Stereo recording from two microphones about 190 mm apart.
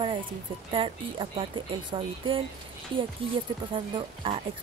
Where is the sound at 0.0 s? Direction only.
25° right (ahead or behind).